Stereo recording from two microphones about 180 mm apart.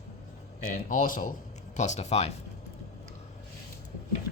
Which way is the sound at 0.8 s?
50° left (ahead or behind).